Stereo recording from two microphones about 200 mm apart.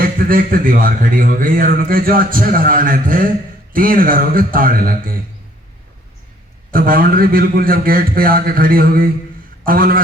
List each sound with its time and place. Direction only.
0.0 s a man's voice: 45° right (ahead or behind)
6.7 s a man's voice: 45° right (ahead or behind)